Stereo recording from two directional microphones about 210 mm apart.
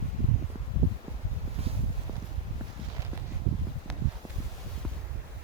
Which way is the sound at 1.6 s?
30° right (ahead or behind).